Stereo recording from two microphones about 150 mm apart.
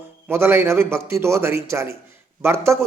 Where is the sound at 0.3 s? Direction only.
15° right (ahead or behind).